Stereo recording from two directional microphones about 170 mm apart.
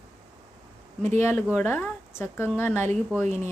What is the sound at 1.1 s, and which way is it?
A woman's voice, 15° left (ahead or behind).